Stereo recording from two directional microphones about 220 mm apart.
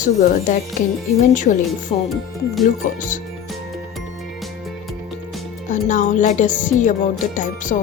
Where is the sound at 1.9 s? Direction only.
30° left (ahead or behind).